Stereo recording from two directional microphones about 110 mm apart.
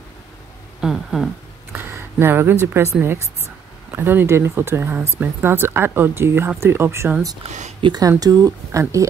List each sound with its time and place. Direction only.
0.7 s speech: 5° right (ahead or behind)
1.7 s a sound: 20° right (ahead or behind)
2.8 s speech: 20° right (ahead or behind)
7.8 s speech: 40° right (ahead or behind)